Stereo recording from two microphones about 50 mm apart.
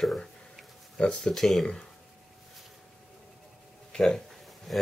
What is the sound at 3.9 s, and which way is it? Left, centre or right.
Speech, centre.